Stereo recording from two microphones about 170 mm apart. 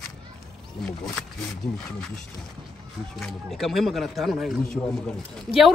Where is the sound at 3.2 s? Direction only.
Centre (ahead or behind).